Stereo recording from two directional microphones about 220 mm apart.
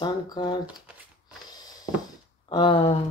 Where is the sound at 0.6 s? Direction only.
5° right (ahead or behind).